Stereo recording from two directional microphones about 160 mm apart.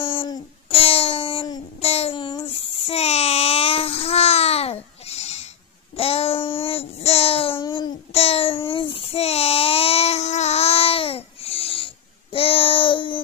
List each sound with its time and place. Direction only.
0.0 s a sound: 35° left (ahead or behind)
1.8 s babbling: 40° left (ahead or behind)
12.3 s child singing: 35° left (ahead or behind)